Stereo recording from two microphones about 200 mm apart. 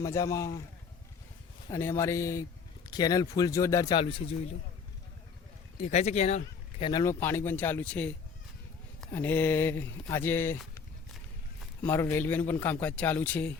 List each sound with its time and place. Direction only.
0.0 s speech: 15° left (ahead or behind)
1.7 s speech: 15° left (ahead or behind)
5.8 s speech: 35° left (ahead or behind)
6.9 s speech: 15° left (ahead or behind)
11.8 s speech: 10° left (ahead or behind)